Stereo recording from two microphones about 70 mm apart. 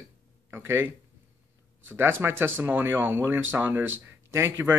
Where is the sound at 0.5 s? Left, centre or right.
Right.